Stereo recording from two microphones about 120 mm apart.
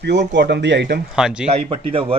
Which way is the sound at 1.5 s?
50° right (ahead or behind).